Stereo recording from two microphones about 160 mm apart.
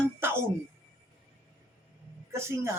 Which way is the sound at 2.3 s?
15° right (ahead or behind).